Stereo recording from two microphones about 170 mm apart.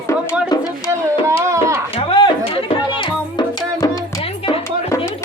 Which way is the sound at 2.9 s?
25° left (ahead or behind).